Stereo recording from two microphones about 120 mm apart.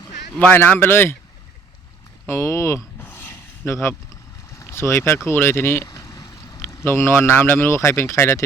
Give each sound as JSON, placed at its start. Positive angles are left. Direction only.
{"t": 0.3, "sound": "speech", "side_deg": 15}
{"t": 2.2, "sound": "a sound", "side_deg": 20}
{"t": 4.4, "sound": "speech", "side_deg": 25}